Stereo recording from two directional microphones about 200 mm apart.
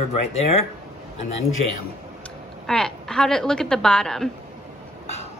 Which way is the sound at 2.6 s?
Centre (ahead or behind).